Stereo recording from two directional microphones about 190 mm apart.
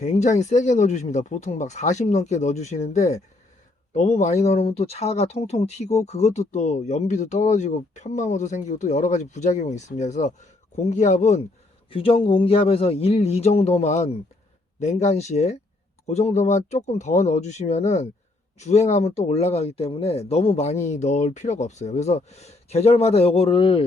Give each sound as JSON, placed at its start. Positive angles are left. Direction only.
{"t": 0.0, "sound": "speech", "side_deg": 40}